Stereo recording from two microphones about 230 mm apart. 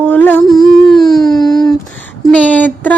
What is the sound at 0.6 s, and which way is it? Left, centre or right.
Speech, centre.